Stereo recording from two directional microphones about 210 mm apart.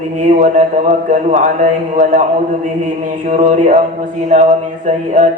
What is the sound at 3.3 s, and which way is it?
A man's voice, 35° right (ahead or behind).